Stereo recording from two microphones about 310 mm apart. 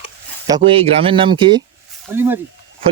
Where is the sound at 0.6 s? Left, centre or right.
Centre.